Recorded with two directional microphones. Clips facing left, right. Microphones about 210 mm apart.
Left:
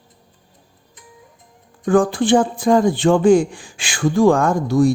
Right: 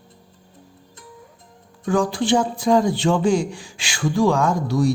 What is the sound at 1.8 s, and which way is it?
A man's voice, 55° left (ahead or behind).